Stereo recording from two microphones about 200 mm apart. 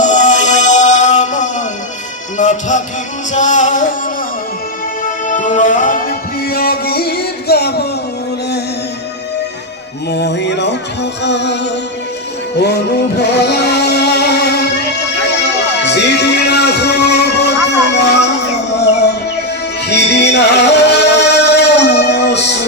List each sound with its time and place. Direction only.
0.0 s music: 40° left (ahead or behind)
5.0 s music: 40° left (ahead or behind)
10.1 s music: 55° left (ahead or behind)
15.8 s music: 60° left (ahead or behind)
19.9 s music: 55° left (ahead or behind)